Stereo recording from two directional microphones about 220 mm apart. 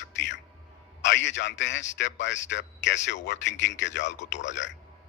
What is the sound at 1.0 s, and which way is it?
A man's voice, 55° left (ahead or behind).